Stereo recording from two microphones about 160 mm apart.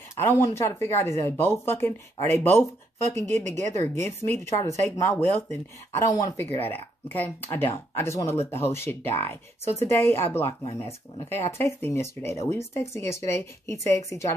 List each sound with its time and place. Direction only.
0.1 s speech: 15° left (ahead or behind)